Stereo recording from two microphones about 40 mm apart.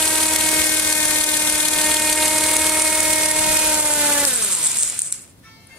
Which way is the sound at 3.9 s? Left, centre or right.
Right.